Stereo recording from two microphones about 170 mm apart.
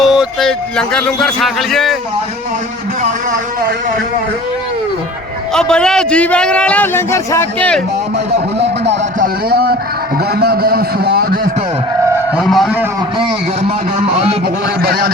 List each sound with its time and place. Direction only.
0.0 s a man's voice: 5° right (ahead or behind)
5.5 s a man's voice: 5° left (ahead or behind)
9.1 s a man's voice: 60° right (ahead or behind)
12.4 s a sound: centre (ahead or behind)
13.1 s a man's voice: 35° right (ahead or behind)
14.8 s a man's voice: 65° right (ahead or behind)